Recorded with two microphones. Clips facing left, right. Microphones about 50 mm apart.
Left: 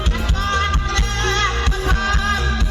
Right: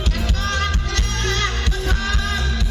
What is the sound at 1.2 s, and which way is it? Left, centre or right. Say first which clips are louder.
Music: left 4 dB; left.